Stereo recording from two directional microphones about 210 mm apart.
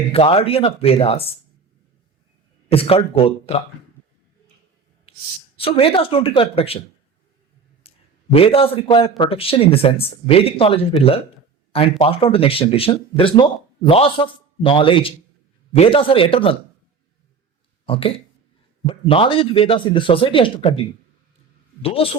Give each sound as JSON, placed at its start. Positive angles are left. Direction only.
{"t": 0.1, "sound": "speech", "side_deg": 30}
{"t": 2.6, "sound": "speech", "side_deg": 25}
{"t": 5.1, "sound": "a sound", "side_deg": 25}
{"t": 5.5, "sound": "speech", "side_deg": 25}
{"t": 7.9, "sound": "speech", "side_deg": 25}
{"t": 17.8, "sound": "speech", "side_deg": 25}
{"t": 21.8, "sound": "speech", "side_deg": 25}